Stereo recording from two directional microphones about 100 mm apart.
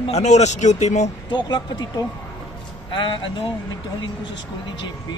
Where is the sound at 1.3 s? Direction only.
50° left (ahead or behind).